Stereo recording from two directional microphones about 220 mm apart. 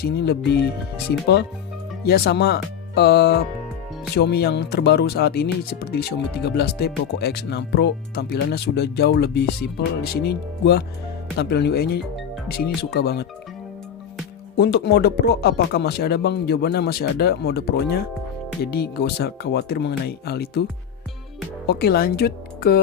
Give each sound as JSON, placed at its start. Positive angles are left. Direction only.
{"t": 0.0, "sound": "speech", "side_deg": 45}
{"t": 14.5, "sound": "speech", "side_deg": 50}
{"t": 21.7, "sound": "speech", "side_deg": 45}